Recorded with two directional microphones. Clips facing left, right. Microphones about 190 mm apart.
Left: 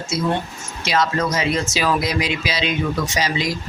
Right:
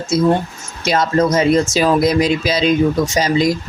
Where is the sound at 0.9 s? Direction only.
45° right (ahead or behind).